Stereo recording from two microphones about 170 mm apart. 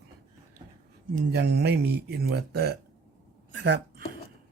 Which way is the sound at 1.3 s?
75° right (ahead or behind).